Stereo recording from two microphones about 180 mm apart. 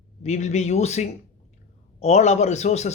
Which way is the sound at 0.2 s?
40° left (ahead or behind).